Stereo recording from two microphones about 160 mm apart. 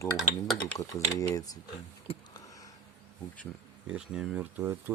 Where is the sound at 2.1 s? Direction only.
40° left (ahead or behind).